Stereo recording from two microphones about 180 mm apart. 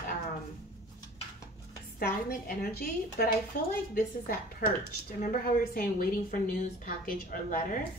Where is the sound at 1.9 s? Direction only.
55° left (ahead or behind).